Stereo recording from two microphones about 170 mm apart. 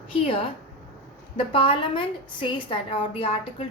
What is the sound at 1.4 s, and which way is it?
A woman's voice, 30° left (ahead or behind).